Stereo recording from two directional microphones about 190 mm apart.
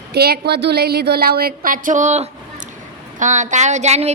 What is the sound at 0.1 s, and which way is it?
A woman's voice, 55° right (ahead or behind).